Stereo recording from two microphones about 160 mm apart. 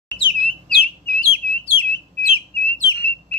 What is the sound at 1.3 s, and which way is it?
Bird, 35° left (ahead or behind).